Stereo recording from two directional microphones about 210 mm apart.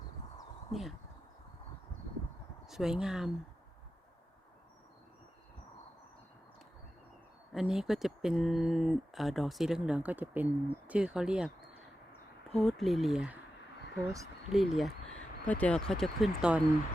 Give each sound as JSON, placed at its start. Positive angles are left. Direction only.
{"t": 0.7, "sound": "speech", "side_deg": 0}
{"t": 2.6, "sound": "speech", "side_deg": 0}
{"t": 7.5, "sound": "speech", "side_deg": 0}
{"t": 12.5, "sound": "speech", "side_deg": 0}
{"t": 14.0, "sound": "speech", "side_deg": -15}
{"t": 14.5, "sound": "speech", "side_deg": 0}